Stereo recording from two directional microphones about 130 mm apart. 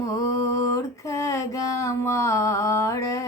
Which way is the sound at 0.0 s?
25° left (ahead or behind).